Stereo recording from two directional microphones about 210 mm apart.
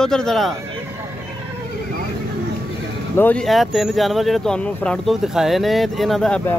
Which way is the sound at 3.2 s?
5° left (ahead or behind).